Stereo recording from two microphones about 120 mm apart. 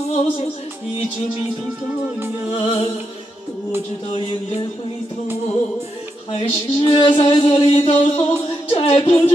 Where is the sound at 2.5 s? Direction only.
55° left (ahead or behind).